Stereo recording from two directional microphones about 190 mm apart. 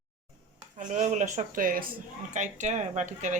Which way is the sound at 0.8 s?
40° right (ahead or behind).